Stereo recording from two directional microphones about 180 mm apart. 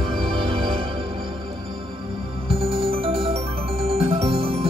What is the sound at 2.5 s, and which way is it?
Music, 30° right (ahead or behind).